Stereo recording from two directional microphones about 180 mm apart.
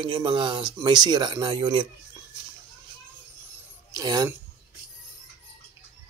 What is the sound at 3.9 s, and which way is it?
Speech, 20° right (ahead or behind).